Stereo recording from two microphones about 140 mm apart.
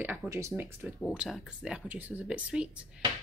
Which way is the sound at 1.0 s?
5° right (ahead or behind).